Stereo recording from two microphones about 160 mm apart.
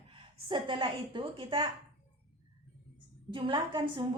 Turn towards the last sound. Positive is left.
turn(degrees=-30)  # may be behind; listen again after turning